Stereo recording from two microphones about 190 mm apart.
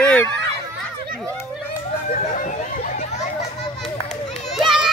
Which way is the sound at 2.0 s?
40° left (ahead or behind).